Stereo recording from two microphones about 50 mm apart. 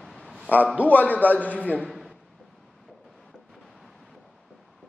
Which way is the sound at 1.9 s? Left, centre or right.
Centre.